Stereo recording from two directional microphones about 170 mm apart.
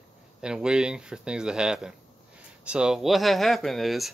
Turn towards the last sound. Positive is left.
turn(degrees=0)  # may be behind; listen again after turning